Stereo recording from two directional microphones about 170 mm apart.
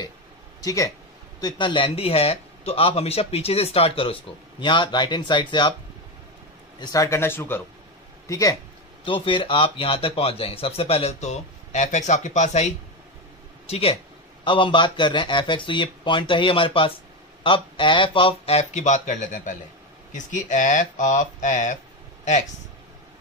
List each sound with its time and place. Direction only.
0.6 s a man's voice: 20° left (ahead or behind)
6.8 s speech: 20° left (ahead or behind)
9.0 s a man's voice: 30° left (ahead or behind); by 21.7 s 45° left (ahead or behind)